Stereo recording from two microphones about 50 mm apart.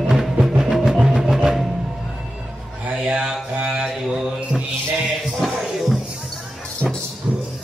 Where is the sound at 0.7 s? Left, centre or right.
Centre.